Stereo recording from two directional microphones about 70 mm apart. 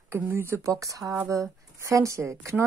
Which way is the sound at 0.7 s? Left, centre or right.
Right.